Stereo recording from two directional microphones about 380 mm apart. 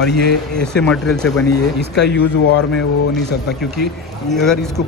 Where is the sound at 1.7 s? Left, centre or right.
Left.